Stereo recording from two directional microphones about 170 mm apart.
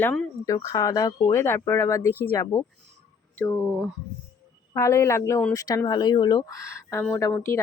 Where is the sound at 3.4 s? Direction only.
5° left (ahead or behind).